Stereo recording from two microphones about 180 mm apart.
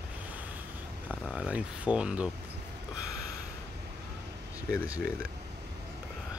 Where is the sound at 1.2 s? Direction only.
5° right (ahead or behind).